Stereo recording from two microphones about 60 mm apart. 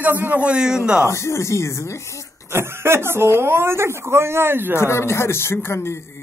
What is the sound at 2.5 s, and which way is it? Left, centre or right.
Speech, right.